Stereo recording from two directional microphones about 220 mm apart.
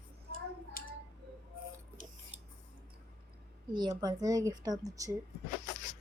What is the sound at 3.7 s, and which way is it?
A woman's voice, 20° right (ahead or behind).